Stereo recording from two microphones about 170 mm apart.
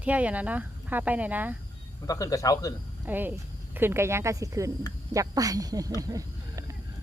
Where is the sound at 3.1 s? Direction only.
10° right (ahead or behind).